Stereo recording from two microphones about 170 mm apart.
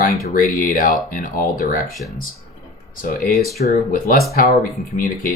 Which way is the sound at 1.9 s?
Centre (ahead or behind).